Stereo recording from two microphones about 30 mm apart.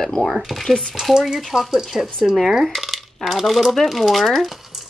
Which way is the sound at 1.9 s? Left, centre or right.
Right.